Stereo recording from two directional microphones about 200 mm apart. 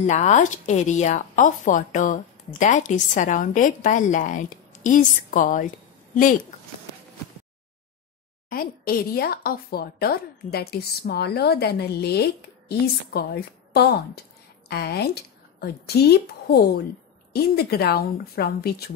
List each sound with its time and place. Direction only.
0.0 s speech: 35° left (ahead or behind)
8.5 s a woman's voice: 45° left (ahead or behind)